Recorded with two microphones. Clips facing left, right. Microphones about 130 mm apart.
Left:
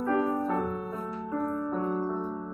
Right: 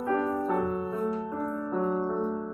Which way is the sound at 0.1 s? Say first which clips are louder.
Even; 20° left (ahead or behind).